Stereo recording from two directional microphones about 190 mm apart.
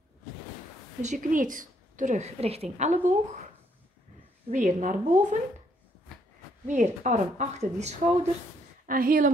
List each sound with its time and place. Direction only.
1.0 s a woman's voice: 40° right (ahead or behind)
4.5 s a woman's voice: 40° right (ahead or behind)
6.7 s a woman's voice: 40° right (ahead or behind)